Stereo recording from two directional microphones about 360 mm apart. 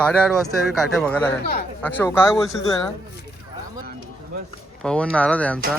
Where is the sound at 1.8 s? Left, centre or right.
Centre.